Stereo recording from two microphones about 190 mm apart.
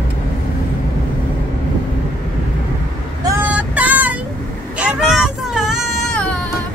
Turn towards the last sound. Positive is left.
turn(degrees=5)  # may be behind; listen again after turning